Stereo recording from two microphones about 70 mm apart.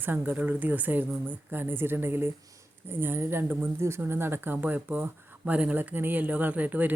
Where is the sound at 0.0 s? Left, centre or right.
Right.